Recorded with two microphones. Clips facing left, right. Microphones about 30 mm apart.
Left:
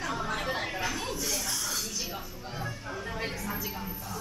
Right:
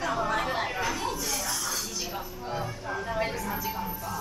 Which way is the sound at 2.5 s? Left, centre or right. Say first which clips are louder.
Right 4 dB; centre.